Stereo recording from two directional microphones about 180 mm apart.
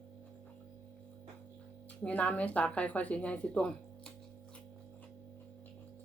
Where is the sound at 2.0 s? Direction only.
10° left (ahead or behind).